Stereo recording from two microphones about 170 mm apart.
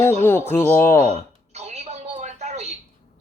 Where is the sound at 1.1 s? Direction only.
40° right (ahead or behind).